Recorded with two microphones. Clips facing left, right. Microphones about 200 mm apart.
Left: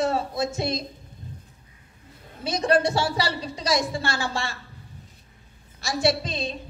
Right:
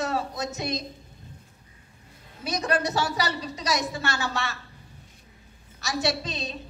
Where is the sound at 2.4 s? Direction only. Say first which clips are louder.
Left 5 dB; 30° left (ahead or behind).